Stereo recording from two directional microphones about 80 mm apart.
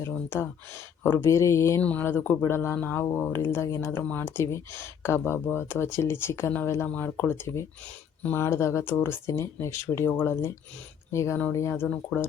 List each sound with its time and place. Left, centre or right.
0.3 s speech: left
1.8 s speech: centre
6.8 s speech: centre
11.1 s speech: left
12.1 s speech: centre